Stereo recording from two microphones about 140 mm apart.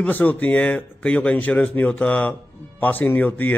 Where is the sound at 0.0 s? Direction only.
10° left (ahead or behind).